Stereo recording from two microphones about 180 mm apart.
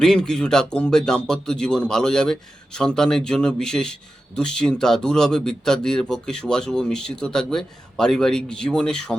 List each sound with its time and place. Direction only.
0.0 s speech: 5° left (ahead or behind)